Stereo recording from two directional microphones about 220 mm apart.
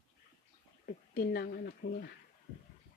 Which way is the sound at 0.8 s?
45° left (ahead or behind).